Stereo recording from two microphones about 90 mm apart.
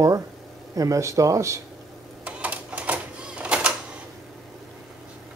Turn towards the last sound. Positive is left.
turn(degrees=-10)  # may be behind; listen again after turning